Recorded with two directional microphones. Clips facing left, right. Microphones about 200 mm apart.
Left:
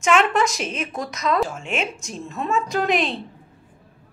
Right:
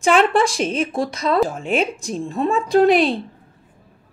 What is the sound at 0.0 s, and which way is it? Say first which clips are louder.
Speech: right 3 dB; 35° right (ahead or behind).